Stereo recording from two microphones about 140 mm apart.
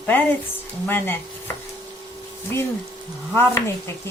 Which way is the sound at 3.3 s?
15° left (ahead or behind).